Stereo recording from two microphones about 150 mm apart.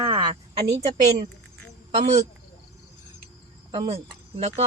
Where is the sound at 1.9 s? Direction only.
50° right (ahead or behind).